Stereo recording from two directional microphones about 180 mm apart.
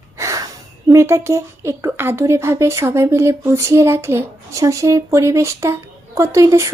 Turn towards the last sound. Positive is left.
turn(degrees=-15)  # may be behind; listen again after turning